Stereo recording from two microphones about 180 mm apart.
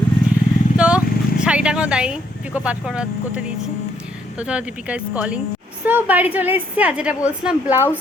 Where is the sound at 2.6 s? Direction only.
5° right (ahead or behind).